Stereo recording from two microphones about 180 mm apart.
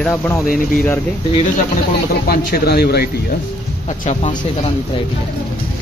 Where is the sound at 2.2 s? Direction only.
60° left (ahead or behind).